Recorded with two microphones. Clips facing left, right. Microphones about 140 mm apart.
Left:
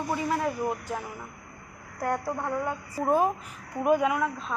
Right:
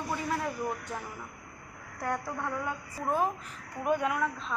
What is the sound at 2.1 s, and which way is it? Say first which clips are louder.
Speech: left 5 dB; 30° left (ahead or behind).